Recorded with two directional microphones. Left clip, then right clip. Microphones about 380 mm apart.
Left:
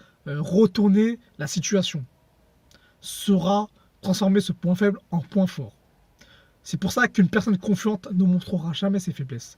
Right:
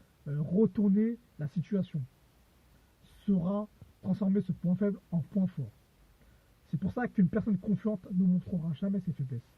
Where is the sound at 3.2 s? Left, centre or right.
Centre.